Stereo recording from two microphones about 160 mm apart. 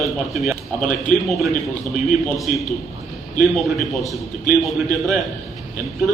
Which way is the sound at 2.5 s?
60° left (ahead or behind).